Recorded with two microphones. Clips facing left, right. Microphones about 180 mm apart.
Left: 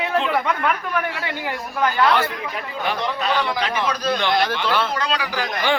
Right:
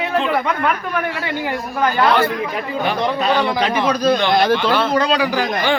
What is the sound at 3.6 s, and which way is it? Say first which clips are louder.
A man's voice: right 6 dB; 15° right (ahead or behind).